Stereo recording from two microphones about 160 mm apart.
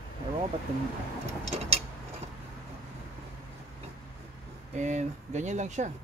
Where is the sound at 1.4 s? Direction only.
40° right (ahead or behind).